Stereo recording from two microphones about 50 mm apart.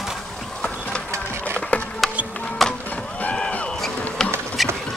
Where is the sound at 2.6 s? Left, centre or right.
Centre.